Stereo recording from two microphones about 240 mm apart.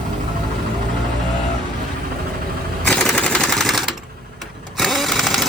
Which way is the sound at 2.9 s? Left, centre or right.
Centre.